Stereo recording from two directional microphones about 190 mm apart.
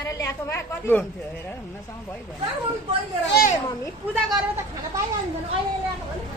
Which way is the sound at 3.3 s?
50° left (ahead or behind).